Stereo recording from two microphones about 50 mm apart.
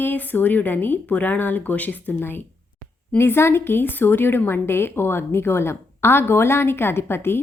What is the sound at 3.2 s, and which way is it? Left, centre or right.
Speech, left.